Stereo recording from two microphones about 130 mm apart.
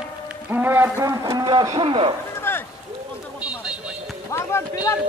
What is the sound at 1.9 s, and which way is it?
Speech, 40° right (ahead or behind).